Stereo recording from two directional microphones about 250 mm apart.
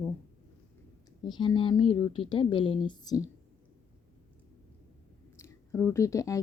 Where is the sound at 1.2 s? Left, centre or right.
Centre.